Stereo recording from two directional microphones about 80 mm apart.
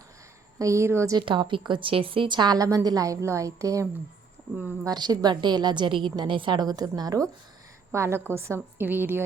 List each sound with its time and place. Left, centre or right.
0.6 s a woman's voice: right
1.2 s a woman's voice: right
2.6 s a woman's voice: right
4.9 s a woman's voice: right
7.9 s a woman's voice: right
8.9 s a woman's voice: right